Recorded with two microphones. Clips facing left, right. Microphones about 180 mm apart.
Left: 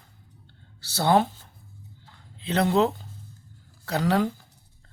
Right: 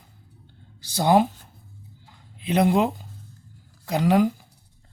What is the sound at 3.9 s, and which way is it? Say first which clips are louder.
Speech: right 4 dB; 15° right (ahead or behind).